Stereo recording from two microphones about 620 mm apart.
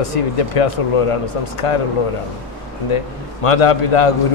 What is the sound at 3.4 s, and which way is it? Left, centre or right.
Speech, left.